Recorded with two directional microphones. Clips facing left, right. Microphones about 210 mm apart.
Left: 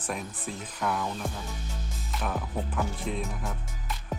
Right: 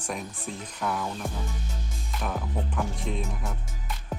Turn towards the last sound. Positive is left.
turn(degrees=0)  # may be behind; listen again after turning